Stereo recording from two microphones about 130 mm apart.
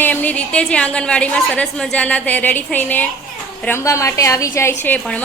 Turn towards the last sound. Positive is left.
turn(degrees=10)  # may be behind; listen again after turning